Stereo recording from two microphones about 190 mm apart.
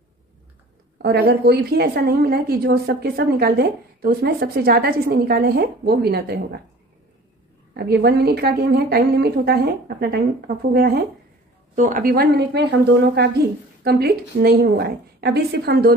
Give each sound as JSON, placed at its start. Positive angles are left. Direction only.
{"t": 0.9, "sound": "a woman's voice", "side_deg": -55}
{"t": 7.7, "sound": "a woman's voice", "side_deg": -55}